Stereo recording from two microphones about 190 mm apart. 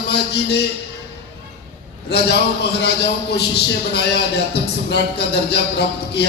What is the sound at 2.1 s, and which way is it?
A man's voice, 60° left (ahead or behind).